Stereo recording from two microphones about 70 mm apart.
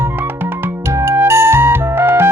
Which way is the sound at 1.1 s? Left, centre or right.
Right.